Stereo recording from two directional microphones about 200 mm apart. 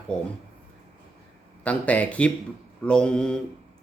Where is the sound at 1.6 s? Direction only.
5° left (ahead or behind).